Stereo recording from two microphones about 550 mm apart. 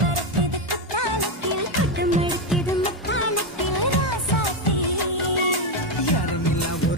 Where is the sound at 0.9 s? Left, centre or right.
Right.